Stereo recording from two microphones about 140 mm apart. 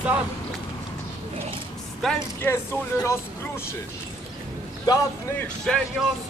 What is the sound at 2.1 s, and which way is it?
Speech, 20° left (ahead or behind).